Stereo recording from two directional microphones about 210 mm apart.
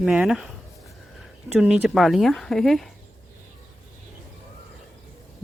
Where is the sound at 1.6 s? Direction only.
5° right (ahead or behind).